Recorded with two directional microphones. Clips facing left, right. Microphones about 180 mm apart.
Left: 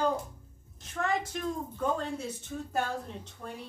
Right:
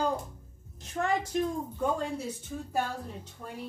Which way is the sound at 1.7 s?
15° right (ahead or behind).